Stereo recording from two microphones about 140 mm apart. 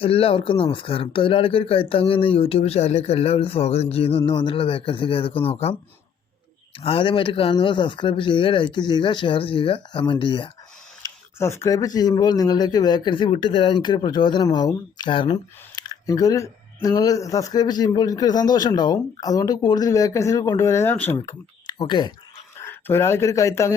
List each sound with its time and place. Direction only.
0.0 s speech: 40° left (ahead or behind)
6.7 s speech: 40° left (ahead or behind)
11.3 s speech: 20° left (ahead or behind)
21.2 s speech: 30° left (ahead or behind)
22.6 s speech: 15° left (ahead or behind)